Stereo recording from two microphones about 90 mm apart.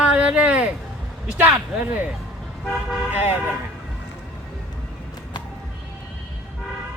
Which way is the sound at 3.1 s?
25° right (ahead or behind).